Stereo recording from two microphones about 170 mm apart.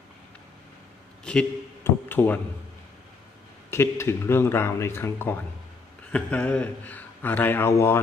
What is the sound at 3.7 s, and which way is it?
Speech, 15° left (ahead or behind).